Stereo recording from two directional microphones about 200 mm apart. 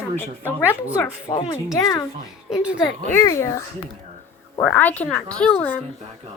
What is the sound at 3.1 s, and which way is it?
Speech, 15° left (ahead or behind).